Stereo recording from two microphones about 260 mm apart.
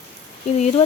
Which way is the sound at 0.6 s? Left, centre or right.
Left.